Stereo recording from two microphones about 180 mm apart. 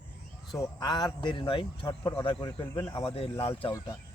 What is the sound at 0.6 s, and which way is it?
Speech, 20° left (ahead or behind).